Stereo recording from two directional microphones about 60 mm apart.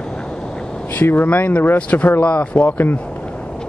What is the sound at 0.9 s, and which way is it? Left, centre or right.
Speech, left.